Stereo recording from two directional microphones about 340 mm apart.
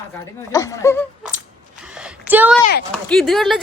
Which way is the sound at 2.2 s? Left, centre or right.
Centre.